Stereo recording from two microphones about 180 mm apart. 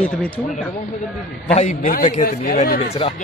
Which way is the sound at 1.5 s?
45° left (ahead or behind).